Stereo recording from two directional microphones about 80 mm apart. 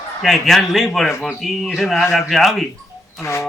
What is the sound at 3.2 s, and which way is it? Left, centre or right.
Speech, left.